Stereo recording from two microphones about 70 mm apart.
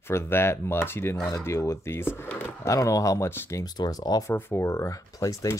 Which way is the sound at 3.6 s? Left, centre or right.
Left.